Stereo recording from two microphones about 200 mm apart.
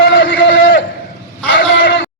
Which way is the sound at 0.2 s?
60° left (ahead or behind).